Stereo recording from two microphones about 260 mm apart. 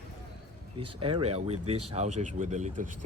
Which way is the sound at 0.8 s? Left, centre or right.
Centre.